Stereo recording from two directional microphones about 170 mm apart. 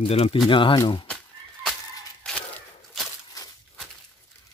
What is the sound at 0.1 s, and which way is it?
Speech, 35° left (ahead or behind).